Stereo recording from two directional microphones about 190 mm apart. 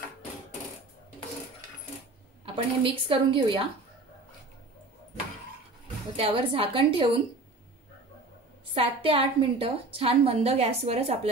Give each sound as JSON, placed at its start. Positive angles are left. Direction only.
{"t": 2.4, "sound": "speech", "side_deg": -25}
{"t": 6.1, "sound": "speech", "side_deg": -30}
{"t": 8.7, "sound": "a woman's voice", "side_deg": -30}